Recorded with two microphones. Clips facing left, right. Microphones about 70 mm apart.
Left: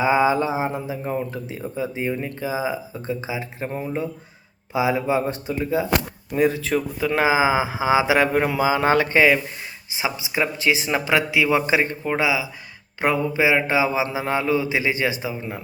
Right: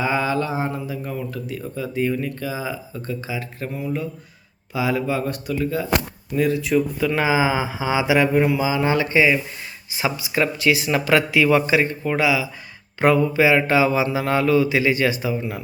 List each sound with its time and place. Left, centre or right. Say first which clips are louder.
0.0 s speech: left 3 dB; centre
3.7 s speech: even; left
8.3 s speech: right 1 dB; left
9.9 s speech: right 2 dB; centre
11.7 s speech: right 1 dB; left